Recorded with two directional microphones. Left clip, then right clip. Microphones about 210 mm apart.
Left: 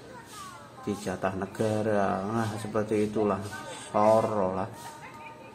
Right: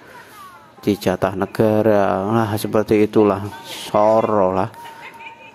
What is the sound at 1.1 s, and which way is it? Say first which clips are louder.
Speech: right 10 dB; 45° right (ahead or behind).